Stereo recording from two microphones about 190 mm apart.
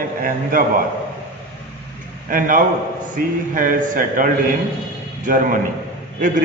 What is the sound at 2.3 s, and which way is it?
A man's voice, 45° right (ahead or behind).